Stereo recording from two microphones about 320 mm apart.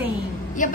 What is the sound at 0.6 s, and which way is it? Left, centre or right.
Speech, left.